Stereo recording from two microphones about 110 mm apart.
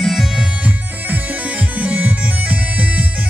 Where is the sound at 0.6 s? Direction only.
15° right (ahead or behind).